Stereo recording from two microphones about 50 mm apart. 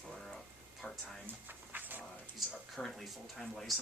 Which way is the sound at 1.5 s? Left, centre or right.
Right.